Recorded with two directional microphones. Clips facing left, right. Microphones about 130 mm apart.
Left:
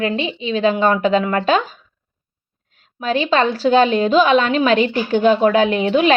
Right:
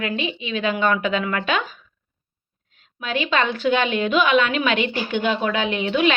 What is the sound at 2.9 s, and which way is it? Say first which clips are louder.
A woman's voice: left 5 dB; 35° left (ahead or behind).